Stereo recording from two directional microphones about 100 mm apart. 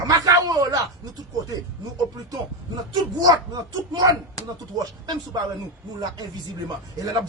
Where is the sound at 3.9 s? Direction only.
40° right (ahead or behind).